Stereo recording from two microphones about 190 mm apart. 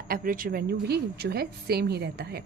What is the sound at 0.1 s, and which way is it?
A woman's voice, 50° right (ahead or behind).